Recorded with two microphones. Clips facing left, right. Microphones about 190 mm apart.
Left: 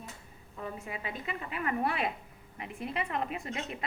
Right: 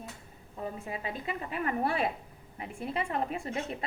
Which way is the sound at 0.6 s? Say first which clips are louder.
Right 2 dB; 35° right (ahead or behind).